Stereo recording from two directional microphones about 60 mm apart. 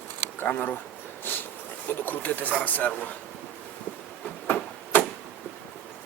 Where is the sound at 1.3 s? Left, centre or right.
Left.